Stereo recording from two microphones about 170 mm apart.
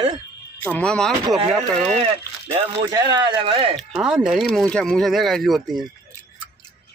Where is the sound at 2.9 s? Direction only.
25° right (ahead or behind).